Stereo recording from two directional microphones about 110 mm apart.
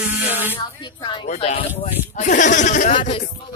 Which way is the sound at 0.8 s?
45° left (ahead or behind).